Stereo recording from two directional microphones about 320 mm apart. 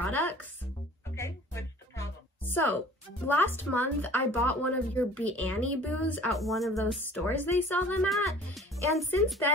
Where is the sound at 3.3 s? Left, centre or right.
Centre.